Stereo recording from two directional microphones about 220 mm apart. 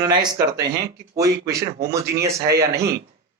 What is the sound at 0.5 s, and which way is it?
Speech, 50° right (ahead or behind).